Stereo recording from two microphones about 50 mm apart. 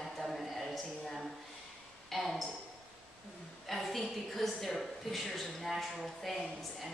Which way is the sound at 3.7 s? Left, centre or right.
Centre.